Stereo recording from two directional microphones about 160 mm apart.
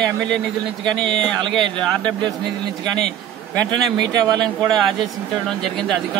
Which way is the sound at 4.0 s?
25° right (ahead or behind).